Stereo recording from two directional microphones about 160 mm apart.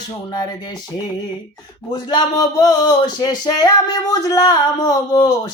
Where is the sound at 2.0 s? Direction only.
25° left (ahead or behind).